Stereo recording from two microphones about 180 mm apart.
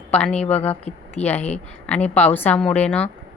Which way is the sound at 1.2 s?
35° left (ahead or behind).